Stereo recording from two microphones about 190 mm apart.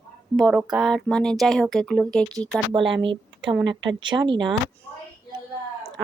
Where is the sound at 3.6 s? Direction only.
75° right (ahead or behind).